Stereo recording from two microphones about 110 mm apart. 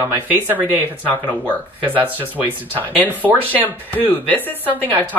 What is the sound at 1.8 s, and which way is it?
Speech, 15° right (ahead or behind).